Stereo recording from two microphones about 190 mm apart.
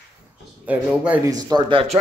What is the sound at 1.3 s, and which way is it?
Speech, 20° right (ahead or behind).